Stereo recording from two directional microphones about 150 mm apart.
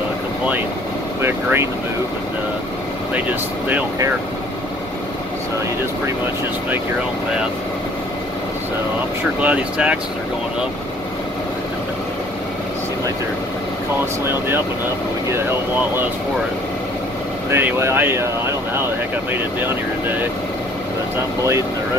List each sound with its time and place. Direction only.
1.2 s speech: 15° right (ahead or behind)
3.6 s speech: 15° right (ahead or behind)
9.4 s speech: 10° right (ahead or behind)
17.5 s speech: 15° right (ahead or behind)